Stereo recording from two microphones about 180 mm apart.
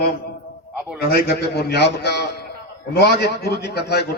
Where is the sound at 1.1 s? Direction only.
60° left (ahead or behind).